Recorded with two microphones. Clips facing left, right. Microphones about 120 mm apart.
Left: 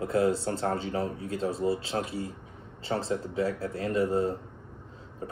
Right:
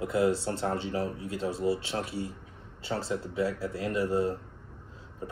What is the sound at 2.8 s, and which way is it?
Speech, centre (ahead or behind).